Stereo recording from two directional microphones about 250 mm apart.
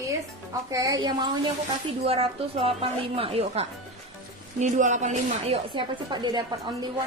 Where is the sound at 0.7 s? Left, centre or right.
Centre.